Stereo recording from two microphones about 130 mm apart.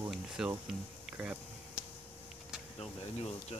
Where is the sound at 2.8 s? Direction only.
50° left (ahead or behind).